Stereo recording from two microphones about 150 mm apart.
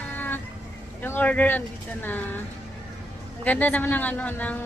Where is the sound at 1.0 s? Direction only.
10° left (ahead or behind).